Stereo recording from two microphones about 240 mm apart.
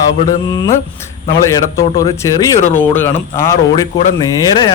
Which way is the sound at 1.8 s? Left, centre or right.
Centre.